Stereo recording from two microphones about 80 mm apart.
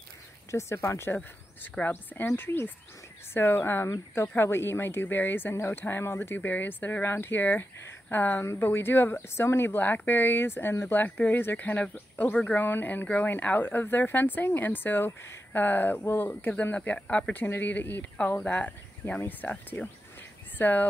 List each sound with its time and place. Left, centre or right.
0.5 s speech: left
18.4 s speech: centre